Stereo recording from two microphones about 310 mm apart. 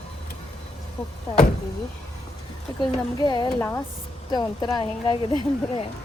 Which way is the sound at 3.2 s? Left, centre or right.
Centre.